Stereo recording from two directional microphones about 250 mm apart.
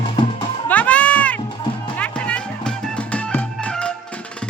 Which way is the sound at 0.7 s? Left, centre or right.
Centre.